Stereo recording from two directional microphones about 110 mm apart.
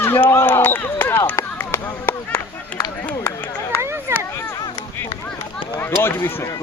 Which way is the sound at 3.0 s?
20° left (ahead or behind).